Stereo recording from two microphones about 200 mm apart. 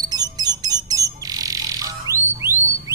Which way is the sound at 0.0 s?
20° right (ahead or behind).